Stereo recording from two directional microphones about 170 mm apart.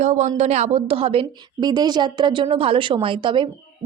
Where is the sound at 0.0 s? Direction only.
40° right (ahead or behind).